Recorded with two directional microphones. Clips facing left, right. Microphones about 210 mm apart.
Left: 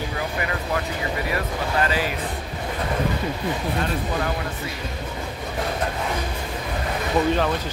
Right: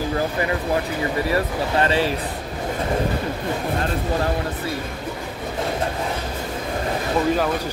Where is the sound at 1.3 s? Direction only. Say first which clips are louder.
Right 4 dB; 30° right (ahead or behind).